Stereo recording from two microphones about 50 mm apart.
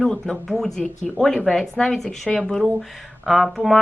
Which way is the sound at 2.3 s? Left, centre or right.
Centre.